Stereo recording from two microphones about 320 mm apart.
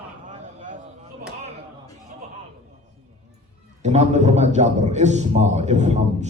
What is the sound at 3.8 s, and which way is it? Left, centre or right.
A man's voice, right.